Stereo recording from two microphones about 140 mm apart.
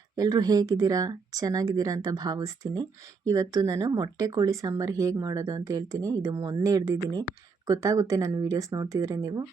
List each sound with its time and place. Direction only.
0.2 s speech: 25° right (ahead or behind)